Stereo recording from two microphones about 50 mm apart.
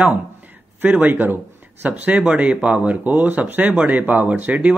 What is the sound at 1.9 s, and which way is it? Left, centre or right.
Speech, right.